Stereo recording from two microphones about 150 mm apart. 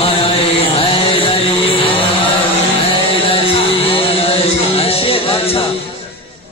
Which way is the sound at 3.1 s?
40° left (ahead or behind).